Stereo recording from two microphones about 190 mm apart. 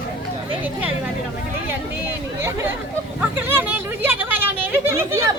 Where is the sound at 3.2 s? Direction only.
10° right (ahead or behind).